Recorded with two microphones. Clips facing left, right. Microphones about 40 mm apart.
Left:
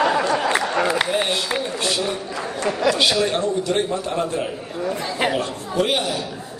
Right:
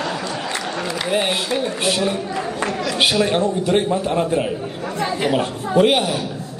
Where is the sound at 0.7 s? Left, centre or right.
Left.